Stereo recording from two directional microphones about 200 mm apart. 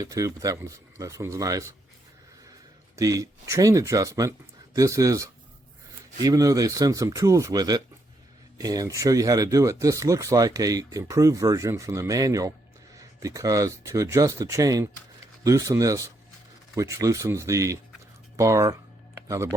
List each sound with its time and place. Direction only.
0.0 s speech: 15° right (ahead or behind)